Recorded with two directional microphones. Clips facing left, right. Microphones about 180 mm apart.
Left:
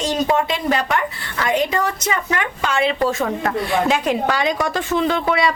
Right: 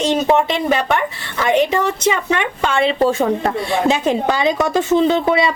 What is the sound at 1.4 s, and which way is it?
Speech, 25° right (ahead or behind).